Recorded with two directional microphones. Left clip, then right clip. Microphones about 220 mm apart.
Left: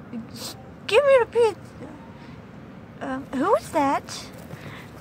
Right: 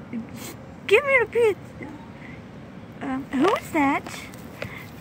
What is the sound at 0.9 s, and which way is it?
Speech, 10° left (ahead or behind).